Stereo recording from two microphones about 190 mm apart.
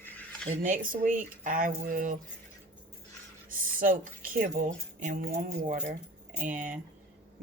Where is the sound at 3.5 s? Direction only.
45° right (ahead or behind).